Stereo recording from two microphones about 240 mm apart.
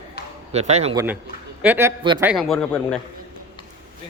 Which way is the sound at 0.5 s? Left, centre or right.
Right.